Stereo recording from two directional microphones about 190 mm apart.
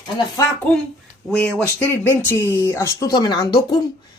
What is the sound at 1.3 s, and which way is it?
Speech, 5° left (ahead or behind).